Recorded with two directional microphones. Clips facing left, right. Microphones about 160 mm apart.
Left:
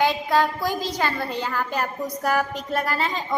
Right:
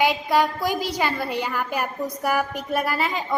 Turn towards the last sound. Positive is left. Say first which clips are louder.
# right 1 dB
turn(degrees=-10)  # may be behind; listen again after turning